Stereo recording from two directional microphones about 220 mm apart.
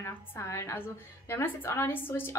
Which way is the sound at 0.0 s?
10° left (ahead or behind).